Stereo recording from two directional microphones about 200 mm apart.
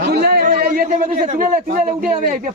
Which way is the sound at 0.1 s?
55° right (ahead or behind).